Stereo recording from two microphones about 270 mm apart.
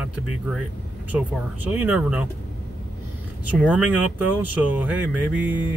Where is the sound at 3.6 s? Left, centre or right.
Centre.